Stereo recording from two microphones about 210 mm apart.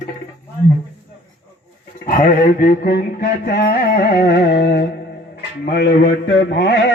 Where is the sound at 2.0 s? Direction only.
40° left (ahead or behind).